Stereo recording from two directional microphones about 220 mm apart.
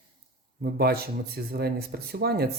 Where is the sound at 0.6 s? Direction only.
45° right (ahead or behind).